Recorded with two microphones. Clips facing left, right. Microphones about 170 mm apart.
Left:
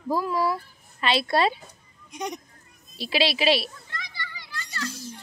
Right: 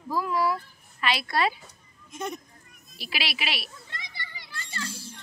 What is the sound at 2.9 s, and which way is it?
Speech, 25° left (ahead or behind).